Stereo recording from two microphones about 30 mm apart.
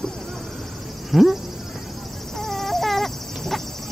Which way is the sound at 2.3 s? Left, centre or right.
Centre.